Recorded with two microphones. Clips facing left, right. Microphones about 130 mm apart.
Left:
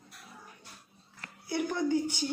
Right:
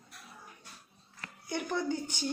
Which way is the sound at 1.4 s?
10° left (ahead or behind).